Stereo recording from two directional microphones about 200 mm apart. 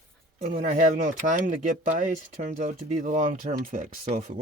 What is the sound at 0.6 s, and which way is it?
Speech, 40° right (ahead or behind).